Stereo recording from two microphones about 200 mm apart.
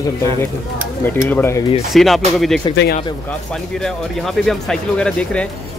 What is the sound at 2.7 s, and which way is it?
Speech, 55° left (ahead or behind).